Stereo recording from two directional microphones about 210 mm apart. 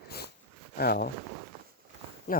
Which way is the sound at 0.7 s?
50° left (ahead or behind).